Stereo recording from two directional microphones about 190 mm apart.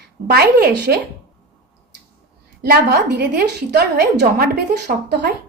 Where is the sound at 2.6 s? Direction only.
55° right (ahead or behind).